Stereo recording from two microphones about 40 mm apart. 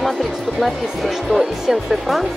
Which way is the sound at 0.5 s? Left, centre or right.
Centre.